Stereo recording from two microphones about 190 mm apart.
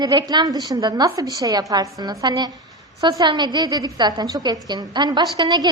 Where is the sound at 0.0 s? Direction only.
20° right (ahead or behind).